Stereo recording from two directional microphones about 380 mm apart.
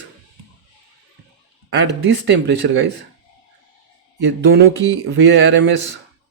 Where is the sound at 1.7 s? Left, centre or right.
Right.